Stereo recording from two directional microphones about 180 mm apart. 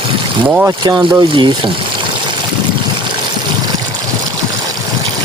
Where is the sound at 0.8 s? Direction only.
25° right (ahead or behind).